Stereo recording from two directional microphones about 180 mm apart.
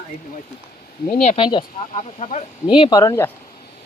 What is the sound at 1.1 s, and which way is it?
Speech, 35° left (ahead or behind).